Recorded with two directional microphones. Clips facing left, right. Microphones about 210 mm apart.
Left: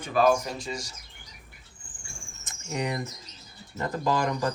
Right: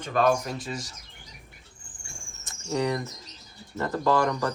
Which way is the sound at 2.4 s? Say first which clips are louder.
Right 4 dB; 20° left (ahead or behind).